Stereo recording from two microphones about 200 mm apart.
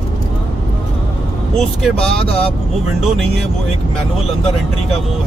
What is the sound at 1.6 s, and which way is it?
Speech, 5° left (ahead or behind).